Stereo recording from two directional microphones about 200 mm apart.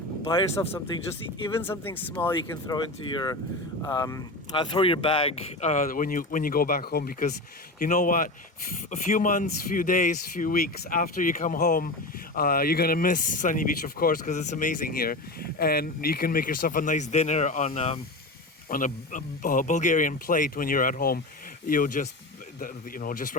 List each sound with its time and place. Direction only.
0.3 s speech: 25° left (ahead or behind)
1.5 s speech: 10° left (ahead or behind)
2.3 s speech: 20° left (ahead or behind)
18.7 s speech: 40° left (ahead or behind)